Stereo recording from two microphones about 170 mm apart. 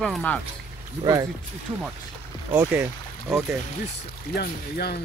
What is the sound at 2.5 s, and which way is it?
Speech, 10° right (ahead or behind).